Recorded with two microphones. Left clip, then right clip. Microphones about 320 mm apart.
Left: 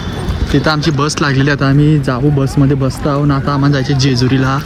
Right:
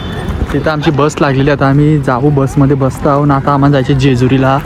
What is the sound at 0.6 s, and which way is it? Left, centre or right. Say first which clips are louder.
A man's voice: right 4 dB; centre.